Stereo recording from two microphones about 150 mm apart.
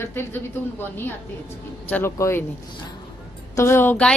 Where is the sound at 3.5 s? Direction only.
15° left (ahead or behind).